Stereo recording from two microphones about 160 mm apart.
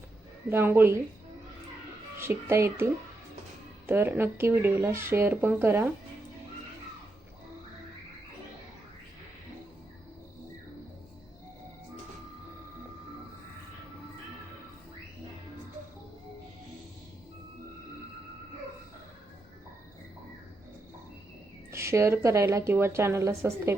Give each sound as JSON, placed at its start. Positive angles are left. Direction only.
{"t": 0.5, "sound": "speech", "side_deg": -15}
{"t": 2.1, "sound": "speech", "side_deg": -15}
{"t": 21.7, "sound": "speech", "side_deg": -15}